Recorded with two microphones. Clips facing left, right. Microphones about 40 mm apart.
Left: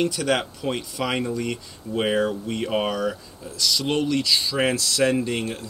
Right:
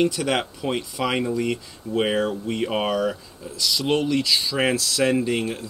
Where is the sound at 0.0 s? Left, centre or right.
Centre.